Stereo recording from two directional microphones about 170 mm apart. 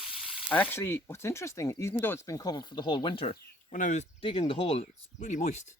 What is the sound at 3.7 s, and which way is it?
Speech, 45° left (ahead or behind).